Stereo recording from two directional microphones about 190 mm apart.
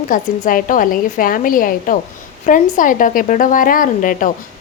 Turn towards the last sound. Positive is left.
turn(degrees=45)  # may be behind; listen again after turning